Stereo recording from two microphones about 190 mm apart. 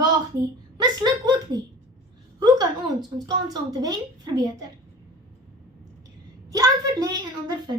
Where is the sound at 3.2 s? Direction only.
20° right (ahead or behind).